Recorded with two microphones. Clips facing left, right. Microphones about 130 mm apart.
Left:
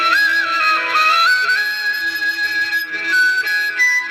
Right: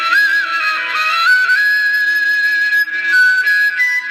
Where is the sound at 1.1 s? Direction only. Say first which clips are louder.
Right 2 dB; 35° left (ahead or behind).